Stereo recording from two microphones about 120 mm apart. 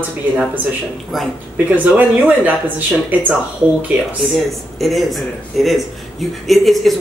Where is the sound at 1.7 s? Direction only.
15° right (ahead or behind).